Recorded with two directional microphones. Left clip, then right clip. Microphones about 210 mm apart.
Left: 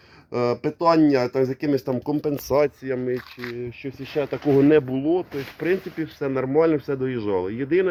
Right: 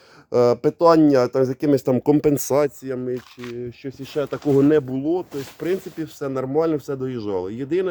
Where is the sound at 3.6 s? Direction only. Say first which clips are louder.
Even; 35° right (ahead or behind).